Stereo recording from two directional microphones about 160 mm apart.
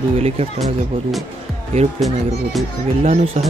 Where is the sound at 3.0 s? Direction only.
40° right (ahead or behind).